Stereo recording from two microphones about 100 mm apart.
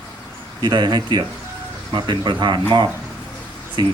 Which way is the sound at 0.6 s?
50° right (ahead or behind).